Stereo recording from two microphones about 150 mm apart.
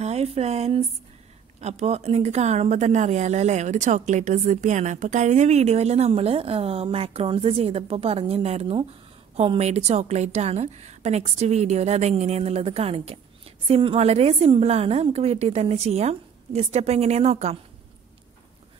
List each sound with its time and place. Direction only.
0.0 s speech: 45° right (ahead or behind)